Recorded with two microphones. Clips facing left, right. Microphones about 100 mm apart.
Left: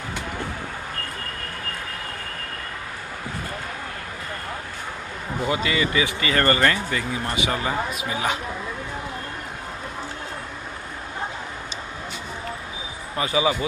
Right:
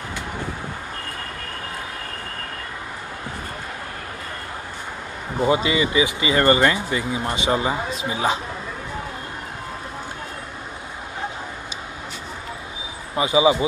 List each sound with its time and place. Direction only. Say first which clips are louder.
5.4 s speech: right 4 dB; 25° right (ahead or behind)
13.1 s speech: right 5 dB; 20° right (ahead or behind)